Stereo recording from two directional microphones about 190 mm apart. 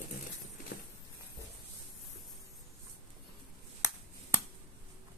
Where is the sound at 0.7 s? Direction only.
55° left (ahead or behind).